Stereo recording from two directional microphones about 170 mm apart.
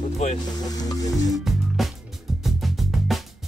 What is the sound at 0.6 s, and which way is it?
Music, 20° left (ahead or behind).